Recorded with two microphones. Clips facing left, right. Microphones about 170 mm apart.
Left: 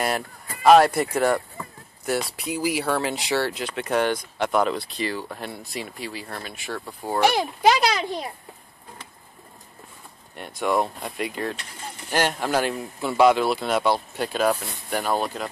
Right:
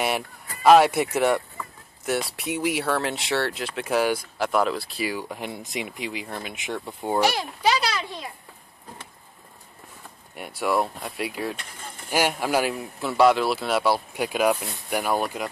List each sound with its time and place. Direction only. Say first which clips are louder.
0.7 s speech: left 1 dB; centre (ahead or behind); by 7.2 s 20° right (ahead or behind)
7.3 s a child's voice: left 4 dB; 45° left (ahead or behind)
10.3 s speech: left 1 dB; 10° right (ahead or behind)